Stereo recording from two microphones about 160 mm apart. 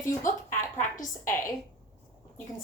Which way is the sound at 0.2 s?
55° left (ahead or behind).